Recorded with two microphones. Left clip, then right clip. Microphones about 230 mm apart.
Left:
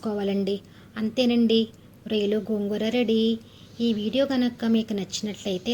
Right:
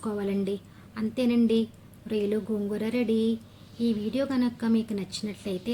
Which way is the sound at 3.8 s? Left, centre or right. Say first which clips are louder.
Left 3 dB; left.